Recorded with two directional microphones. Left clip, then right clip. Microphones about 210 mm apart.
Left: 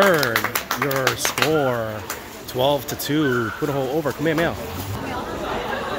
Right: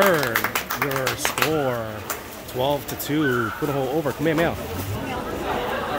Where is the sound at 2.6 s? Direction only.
20° left (ahead or behind).